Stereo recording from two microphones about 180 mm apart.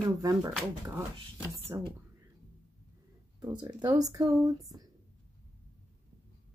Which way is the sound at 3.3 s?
25° right (ahead or behind).